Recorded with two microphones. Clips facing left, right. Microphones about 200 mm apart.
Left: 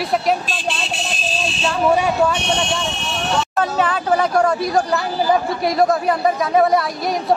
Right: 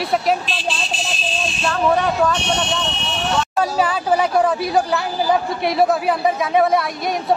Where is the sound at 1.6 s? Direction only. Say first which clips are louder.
Left 1 dB; 10° left (ahead or behind).